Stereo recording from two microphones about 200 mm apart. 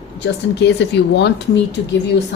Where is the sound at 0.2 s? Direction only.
65° left (ahead or behind).